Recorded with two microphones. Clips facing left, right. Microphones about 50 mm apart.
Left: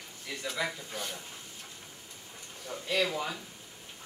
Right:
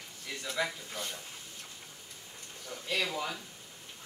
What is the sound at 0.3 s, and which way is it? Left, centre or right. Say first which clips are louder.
Speech: even; centre.